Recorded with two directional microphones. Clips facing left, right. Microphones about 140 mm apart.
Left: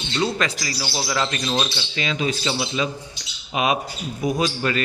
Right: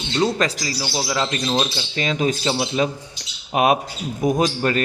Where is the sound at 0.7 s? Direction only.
15° right (ahead or behind).